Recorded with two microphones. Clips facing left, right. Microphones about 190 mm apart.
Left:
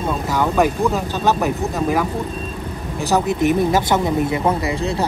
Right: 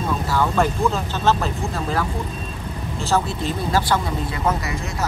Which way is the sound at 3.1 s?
20° left (ahead or behind).